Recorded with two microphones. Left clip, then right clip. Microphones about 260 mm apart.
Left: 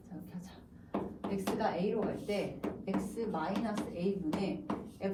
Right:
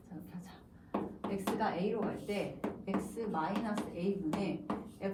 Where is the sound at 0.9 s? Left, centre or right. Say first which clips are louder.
Even; centre.